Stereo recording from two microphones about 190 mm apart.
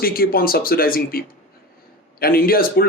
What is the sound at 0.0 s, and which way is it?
Speech, 50° left (ahead or behind).